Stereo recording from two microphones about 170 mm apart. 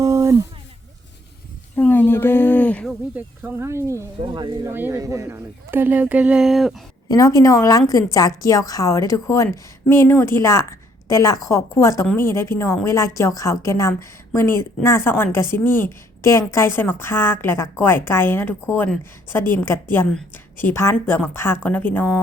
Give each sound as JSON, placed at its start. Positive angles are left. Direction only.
{"t": 0.0, "sound": "a sound", "side_deg": -20}
{"t": 1.7, "sound": "speech", "side_deg": 10}
{"t": 3.2, "sound": "speech", "side_deg": -10}
{"t": 4.3, "sound": "speech", "side_deg": -25}
{"t": 4.7, "sound": "speech", "side_deg": -15}
{"t": 7.1, "sound": "a woman's voice", "side_deg": 20}